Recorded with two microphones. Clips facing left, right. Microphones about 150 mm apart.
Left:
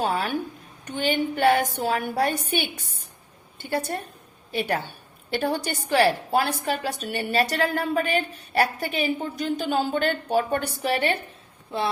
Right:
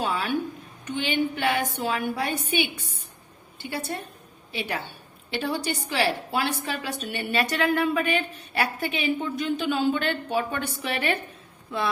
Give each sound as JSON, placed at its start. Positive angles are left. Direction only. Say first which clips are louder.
{"t": 0.0, "sound": "a woman's voice", "louder": "left 1 dB", "side_deg": 45}
{"t": 5.3, "sound": "a woman's voice", "louder": "left 2 dB", "side_deg": 50}